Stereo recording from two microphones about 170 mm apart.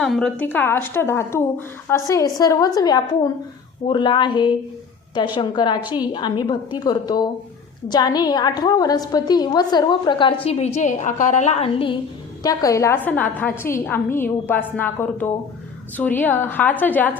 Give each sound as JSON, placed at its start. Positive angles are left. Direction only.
{"t": 0.0, "sound": "a woman's voice", "side_deg": 0}
{"t": 12.4, "sound": "a woman's voice", "side_deg": 20}